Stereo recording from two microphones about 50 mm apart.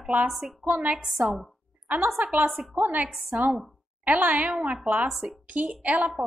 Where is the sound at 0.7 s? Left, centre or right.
Right.